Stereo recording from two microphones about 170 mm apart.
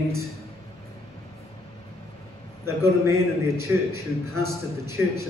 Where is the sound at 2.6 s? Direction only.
15° right (ahead or behind).